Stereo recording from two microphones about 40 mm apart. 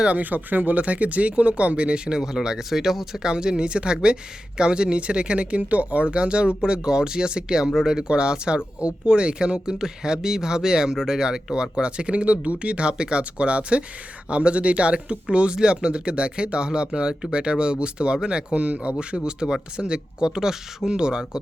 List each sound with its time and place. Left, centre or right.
0.1 s speech: right; by 3.2 s centre
3.2 s speech: right